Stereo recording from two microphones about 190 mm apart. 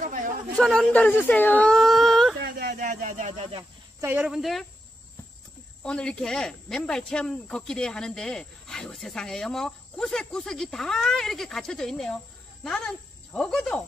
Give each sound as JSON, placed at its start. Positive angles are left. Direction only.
{"t": 0.0, "sound": "a sound", "side_deg": -45}
{"t": 0.6, "sound": "speech", "side_deg": 5}
{"t": 2.4, "sound": "speech", "side_deg": -55}
{"t": 4.0, "sound": "speech", "side_deg": -10}
{"t": 5.9, "sound": "speech", "side_deg": 5}